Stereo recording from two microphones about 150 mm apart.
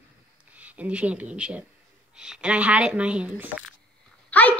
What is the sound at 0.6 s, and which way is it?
Speech, 10° right (ahead or behind).